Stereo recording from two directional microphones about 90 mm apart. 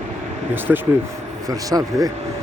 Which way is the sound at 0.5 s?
25° right (ahead or behind).